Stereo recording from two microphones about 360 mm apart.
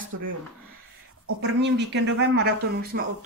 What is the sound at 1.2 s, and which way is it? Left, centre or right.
Speech, right.